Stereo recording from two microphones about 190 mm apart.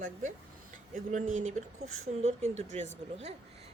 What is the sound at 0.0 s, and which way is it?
Speech, 40° right (ahead or behind).